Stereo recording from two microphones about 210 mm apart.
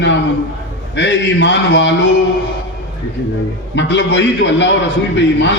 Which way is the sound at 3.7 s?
60° left (ahead or behind).